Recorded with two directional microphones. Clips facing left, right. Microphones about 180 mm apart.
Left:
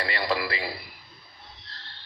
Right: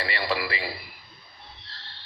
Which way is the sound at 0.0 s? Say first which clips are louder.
Left 1 dB; 40° left (ahead or behind).